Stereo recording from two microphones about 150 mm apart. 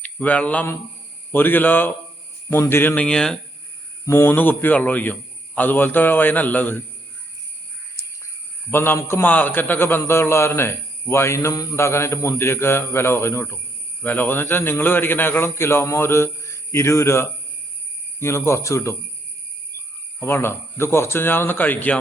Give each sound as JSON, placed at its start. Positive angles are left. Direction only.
{"t": 0.0, "sound": "a man's voice", "side_deg": 10}
{"t": 4.0, "sound": "a man's voice", "side_deg": 20}
{"t": 8.7, "sound": "a man's voice", "side_deg": 15}
{"t": 20.1, "sound": "a man's voice", "side_deg": 15}